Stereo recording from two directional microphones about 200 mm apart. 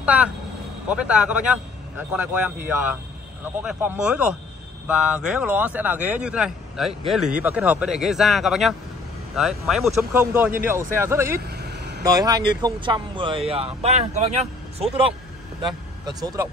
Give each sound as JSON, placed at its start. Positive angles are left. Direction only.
{"t": 0.0, "sound": "vehicle", "side_deg": -5}
{"t": 0.8, "sound": "a man's voice", "side_deg": -5}
{"t": 11.4, "sound": "vehicle", "side_deg": -55}
{"t": 12.0, "sound": "speech", "side_deg": -20}
{"t": 15.6, "sound": "speech", "side_deg": -20}